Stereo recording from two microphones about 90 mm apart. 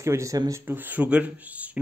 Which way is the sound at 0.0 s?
35° right (ahead or behind).